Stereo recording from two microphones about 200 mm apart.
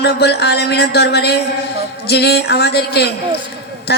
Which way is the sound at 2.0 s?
55° left (ahead or behind).